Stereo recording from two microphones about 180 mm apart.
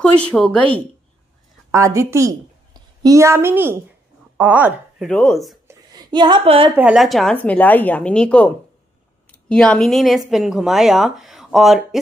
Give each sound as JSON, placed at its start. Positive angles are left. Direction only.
{"t": 0.0, "sound": "a woman's voice", "side_deg": 5}
{"t": 1.7, "sound": "a woman's voice", "side_deg": -15}
{"t": 5.0, "sound": "a woman's voice", "side_deg": 5}
{"t": 5.7, "sound": "a sound", "side_deg": -20}
{"t": 6.7, "sound": "a woman's voice", "side_deg": -5}